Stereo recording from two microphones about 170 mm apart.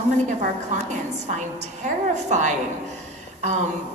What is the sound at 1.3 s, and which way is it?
A woman's voice, 45° right (ahead or behind).